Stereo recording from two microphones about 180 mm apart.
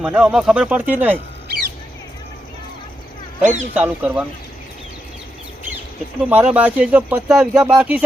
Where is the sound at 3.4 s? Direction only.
45° right (ahead or behind).